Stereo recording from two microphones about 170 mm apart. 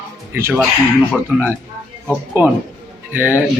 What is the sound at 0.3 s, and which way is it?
Speech, 15° right (ahead or behind).